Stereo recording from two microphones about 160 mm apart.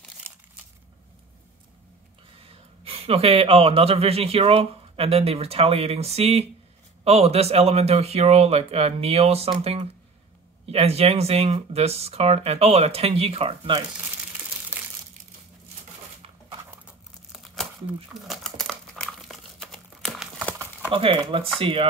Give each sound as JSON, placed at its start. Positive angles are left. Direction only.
{"t": 0.3, "sound": "a sound", "side_deg": -15}
{"t": 2.4, "sound": "speech", "side_deg": -35}
{"t": 14.8, "sound": "crumpling", "side_deg": -10}
{"t": 17.3, "sound": "crumpling", "side_deg": 0}
{"t": 19.0, "sound": "dog", "side_deg": 0}
{"t": 20.9, "sound": "speech", "side_deg": -35}